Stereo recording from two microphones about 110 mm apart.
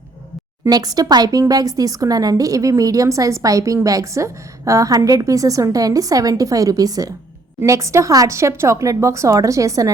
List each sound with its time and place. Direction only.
0.7 s a woman's voice: 35° right (ahead or behind)